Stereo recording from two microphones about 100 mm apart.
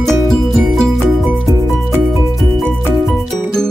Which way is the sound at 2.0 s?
Centre (ahead or behind).